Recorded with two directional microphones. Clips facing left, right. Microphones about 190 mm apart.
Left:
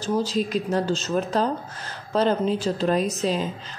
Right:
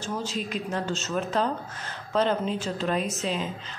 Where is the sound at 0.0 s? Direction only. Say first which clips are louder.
Left 7 dB; 35° left (ahead or behind).